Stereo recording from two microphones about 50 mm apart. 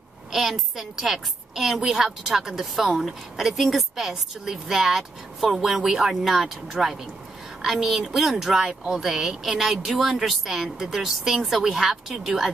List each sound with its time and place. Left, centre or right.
0.3 s speech: centre